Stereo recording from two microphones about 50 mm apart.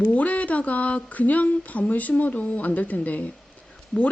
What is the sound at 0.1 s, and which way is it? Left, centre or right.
Speech, left.